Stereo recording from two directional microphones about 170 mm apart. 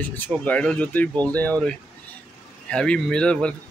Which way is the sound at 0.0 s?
10° left (ahead or behind).